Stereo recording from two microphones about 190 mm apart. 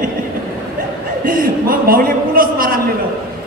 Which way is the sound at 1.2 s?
50° right (ahead or behind).